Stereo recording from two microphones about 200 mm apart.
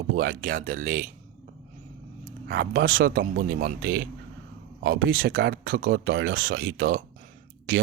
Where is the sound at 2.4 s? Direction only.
55° right (ahead or behind).